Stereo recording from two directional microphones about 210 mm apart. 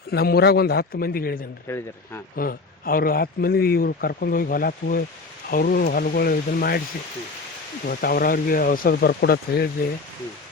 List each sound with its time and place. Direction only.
0.1 s speech: 50° left (ahead or behind)
1.6 s speech: 10° left (ahead or behind)
2.3 s speech: 45° left (ahead or behind)
7.9 s speech: 45° left (ahead or behind)